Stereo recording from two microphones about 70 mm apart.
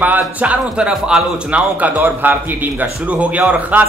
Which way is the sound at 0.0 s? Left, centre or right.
Right.